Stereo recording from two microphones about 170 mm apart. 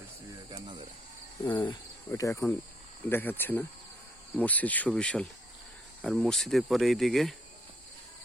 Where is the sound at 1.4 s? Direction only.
25° left (ahead or behind); by 5.3 s 5° left (ahead or behind).